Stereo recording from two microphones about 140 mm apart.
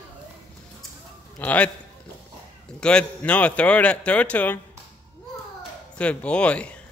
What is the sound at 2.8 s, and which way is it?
Speech, 5° left (ahead or behind).